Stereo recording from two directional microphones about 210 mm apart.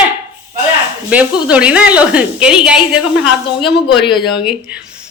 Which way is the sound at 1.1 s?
5° right (ahead or behind).